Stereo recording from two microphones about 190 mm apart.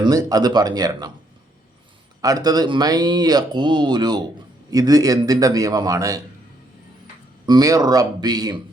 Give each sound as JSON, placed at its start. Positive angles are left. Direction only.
{"t": 0.0, "sound": "speech", "side_deg": -20}
{"t": 2.2, "sound": "speech", "side_deg": -20}
{"t": 7.4, "sound": "speech", "side_deg": -20}